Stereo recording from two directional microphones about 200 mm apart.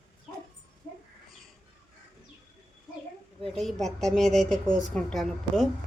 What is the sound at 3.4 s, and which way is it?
A woman's voice, centre (ahead or behind).